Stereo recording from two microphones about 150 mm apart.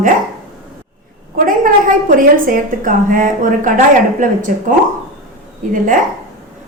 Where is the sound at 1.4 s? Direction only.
65° right (ahead or behind).